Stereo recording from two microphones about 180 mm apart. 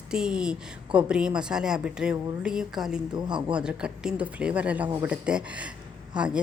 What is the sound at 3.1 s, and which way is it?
Speech, 25° right (ahead or behind).